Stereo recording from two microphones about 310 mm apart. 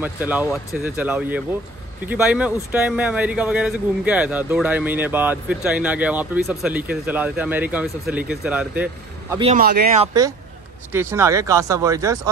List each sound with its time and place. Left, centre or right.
0.0 s speech: centre
9.3 s speech: centre
9.6 s speech: right
10.9 s speech: centre